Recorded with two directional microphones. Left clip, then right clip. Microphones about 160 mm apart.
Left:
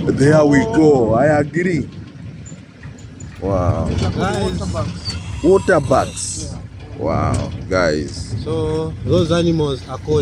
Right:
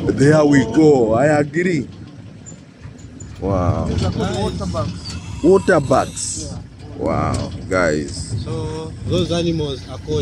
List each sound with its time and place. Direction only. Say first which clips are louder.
0.0 s speech: left 1 dB; centre (ahead or behind)
3.3 s speech: left 1 dB; centre (ahead or behind)
8.5 s speech: left 8 dB; 60° left (ahead or behind)
9.1 s speech: left 3 dB; centre (ahead or behind)